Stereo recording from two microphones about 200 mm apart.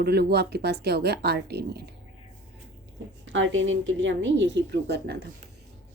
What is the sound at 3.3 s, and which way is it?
Speech, 70° right (ahead or behind).